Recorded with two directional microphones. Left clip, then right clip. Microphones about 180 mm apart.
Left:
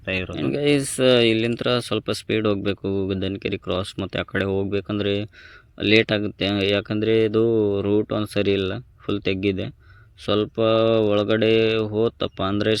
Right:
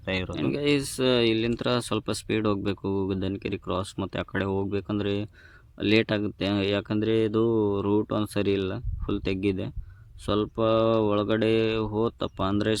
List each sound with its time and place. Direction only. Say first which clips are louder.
0.0 s speech: left 3 dB; centre (ahead or behind)
0.5 s speech: left 6 dB; 20° left (ahead or behind)
1.5 s speech: left 5 dB; centre (ahead or behind)